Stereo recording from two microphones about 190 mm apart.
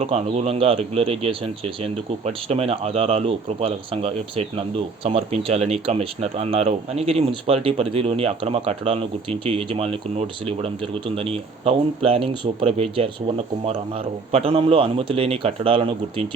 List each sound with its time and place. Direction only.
0.0 s speech: 35° right (ahead or behind)
14.3 s speech: 30° right (ahead or behind)